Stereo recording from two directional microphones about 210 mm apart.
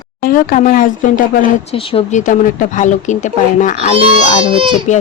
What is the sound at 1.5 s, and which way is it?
Speech, 25° left (ahead or behind).